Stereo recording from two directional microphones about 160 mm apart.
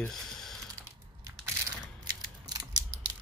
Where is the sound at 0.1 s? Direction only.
Centre (ahead or behind).